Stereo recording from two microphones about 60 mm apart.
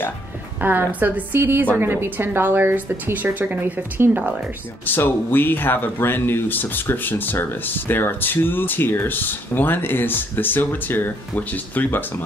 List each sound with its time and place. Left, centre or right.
0.6 s speech: right
4.8 s speech: left